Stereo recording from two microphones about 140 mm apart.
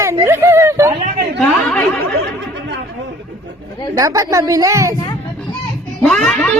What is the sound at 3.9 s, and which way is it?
Speech, 20° right (ahead or behind).